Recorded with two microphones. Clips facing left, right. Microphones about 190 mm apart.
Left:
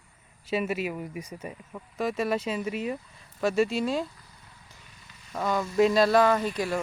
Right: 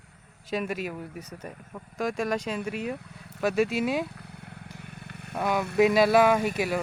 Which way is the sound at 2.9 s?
70° right (ahead or behind).